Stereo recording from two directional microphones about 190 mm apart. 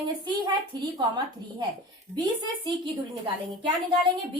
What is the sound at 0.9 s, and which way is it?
A woman's voice, 20° right (ahead or behind).